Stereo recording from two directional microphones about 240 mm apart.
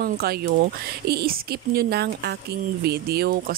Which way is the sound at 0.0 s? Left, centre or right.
Right.